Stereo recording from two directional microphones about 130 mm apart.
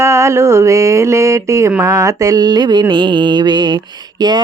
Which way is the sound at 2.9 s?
35° right (ahead or behind).